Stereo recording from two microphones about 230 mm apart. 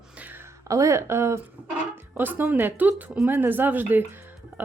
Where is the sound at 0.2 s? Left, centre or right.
Centre.